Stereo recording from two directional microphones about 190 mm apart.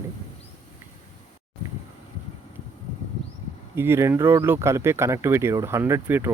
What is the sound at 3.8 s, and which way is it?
Speech, 15° right (ahead or behind).